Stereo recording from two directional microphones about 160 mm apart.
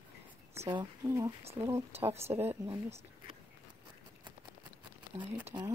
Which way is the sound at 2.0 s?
40° right (ahead or behind).